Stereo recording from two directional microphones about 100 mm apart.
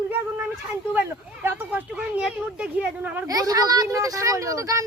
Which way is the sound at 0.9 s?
20° right (ahead or behind).